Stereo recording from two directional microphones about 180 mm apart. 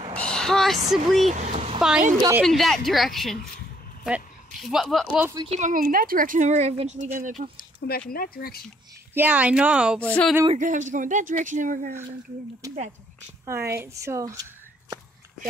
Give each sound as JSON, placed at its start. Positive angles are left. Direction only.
{"t": 0.1, "sound": "a sound", "side_deg": 5}
{"t": 0.8, "sound": "a woman's voice", "side_deg": 0}
{"t": 1.3, "sound": "a sound", "side_deg": -40}
{"t": 1.8, "sound": "a woman's voice", "side_deg": -5}
{"t": 5.5, "sound": "speech", "side_deg": -45}
{"t": 8.1, "sound": "speech", "side_deg": 55}
{"t": 9.1, "sound": "speech", "side_deg": -10}
{"t": 10.0, "sound": "speech", "side_deg": 5}
{"t": 10.5, "sound": "speech", "side_deg": -45}
{"t": 12.6, "sound": "speech", "side_deg": -20}